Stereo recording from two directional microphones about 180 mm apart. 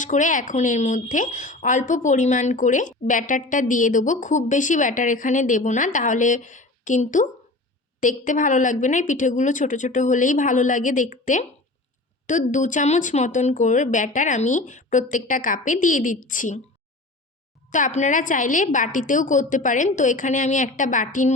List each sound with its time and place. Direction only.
0.0 s a woman's voice: 45° left (ahead or behind)
17.7 s a woman's voice: 45° left (ahead or behind)